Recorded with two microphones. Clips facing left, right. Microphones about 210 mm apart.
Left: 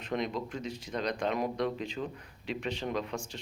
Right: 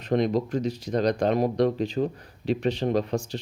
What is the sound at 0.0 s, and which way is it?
Speech, 40° right (ahead or behind).